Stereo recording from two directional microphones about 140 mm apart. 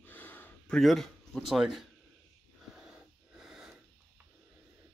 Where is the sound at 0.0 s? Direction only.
15° left (ahead or behind).